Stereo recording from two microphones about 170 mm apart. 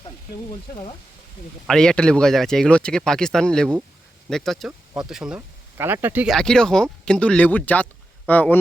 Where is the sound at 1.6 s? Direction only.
5° left (ahead or behind).